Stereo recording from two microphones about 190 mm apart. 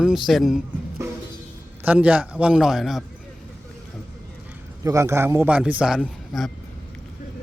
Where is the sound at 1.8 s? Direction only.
10° right (ahead or behind).